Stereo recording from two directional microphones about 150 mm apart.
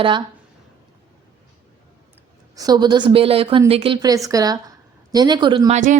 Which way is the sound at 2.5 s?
25° right (ahead or behind).